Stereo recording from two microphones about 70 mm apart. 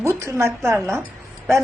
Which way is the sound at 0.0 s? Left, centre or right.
Right.